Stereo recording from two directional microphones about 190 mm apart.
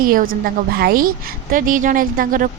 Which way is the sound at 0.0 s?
50° right (ahead or behind).